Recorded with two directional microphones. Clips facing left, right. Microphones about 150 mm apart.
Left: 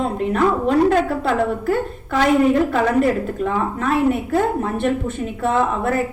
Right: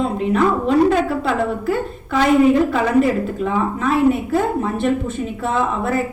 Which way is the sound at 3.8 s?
55° left (ahead or behind).